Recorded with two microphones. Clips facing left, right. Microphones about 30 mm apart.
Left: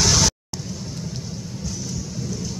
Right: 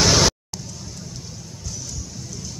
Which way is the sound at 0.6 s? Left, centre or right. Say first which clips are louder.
Left 5 dB; centre.